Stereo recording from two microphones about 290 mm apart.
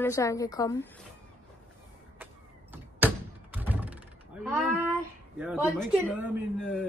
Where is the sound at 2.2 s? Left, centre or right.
Centre.